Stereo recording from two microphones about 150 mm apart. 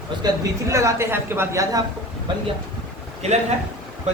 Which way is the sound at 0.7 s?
20° right (ahead or behind).